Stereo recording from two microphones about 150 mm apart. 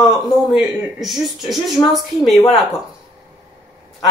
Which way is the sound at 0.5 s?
Centre (ahead or behind).